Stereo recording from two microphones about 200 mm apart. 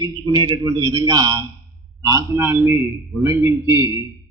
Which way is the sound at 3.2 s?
15° right (ahead or behind).